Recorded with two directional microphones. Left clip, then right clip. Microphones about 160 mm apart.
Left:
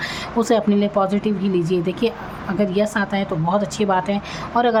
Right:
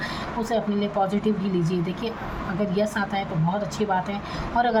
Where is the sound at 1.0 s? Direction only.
40° left (ahead or behind).